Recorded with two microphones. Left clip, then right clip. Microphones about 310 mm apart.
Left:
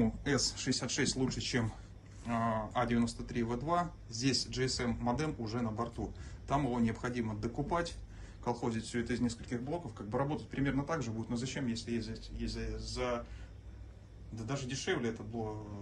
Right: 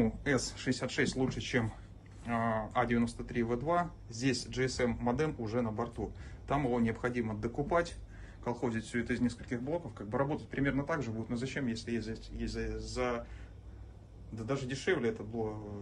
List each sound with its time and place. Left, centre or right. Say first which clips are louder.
0.0 s a man's voice: right 1 dB; centre
14.3 s speech: right 3 dB; centre